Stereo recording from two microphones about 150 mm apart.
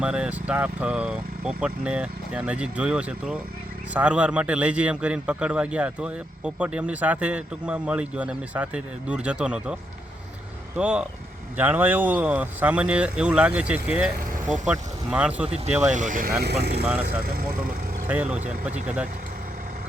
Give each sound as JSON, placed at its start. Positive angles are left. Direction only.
{"t": 0.0, "sound": "a man's voice", "side_deg": -5}
{"t": 10.8, "sound": "a man's voice", "side_deg": -10}
{"t": 15.4, "sound": "speech", "side_deg": -45}
{"t": 15.9, "sound": "speech", "side_deg": -55}
{"t": 16.4, "sound": "speech", "side_deg": -90}
{"t": 16.8, "sound": "a man's voice", "side_deg": -10}
{"t": 17.2, "sound": "speech", "side_deg": -85}
{"t": 18.1, "sound": "a man's voice", "side_deg": -10}